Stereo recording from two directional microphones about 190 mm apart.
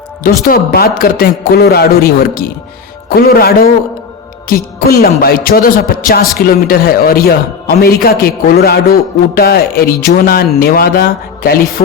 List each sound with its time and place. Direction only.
0.4 s a man's voice: 50° left (ahead or behind)